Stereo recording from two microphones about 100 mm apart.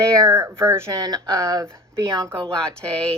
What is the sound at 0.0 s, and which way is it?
Speech, 30° right (ahead or behind).